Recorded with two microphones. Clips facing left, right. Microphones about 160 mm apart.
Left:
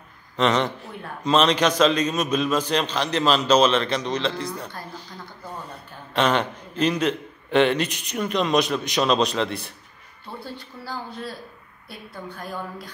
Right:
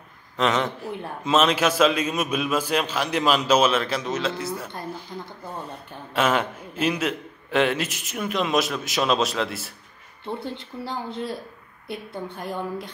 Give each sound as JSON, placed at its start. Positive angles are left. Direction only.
{"t": 0.4, "sound": "a man's voice", "side_deg": 0}
{"t": 6.1, "sound": "a man's voice", "side_deg": -5}
{"t": 10.2, "sound": "speech", "side_deg": -20}